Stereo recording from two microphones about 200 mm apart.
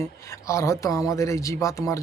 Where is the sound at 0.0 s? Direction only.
15° left (ahead or behind).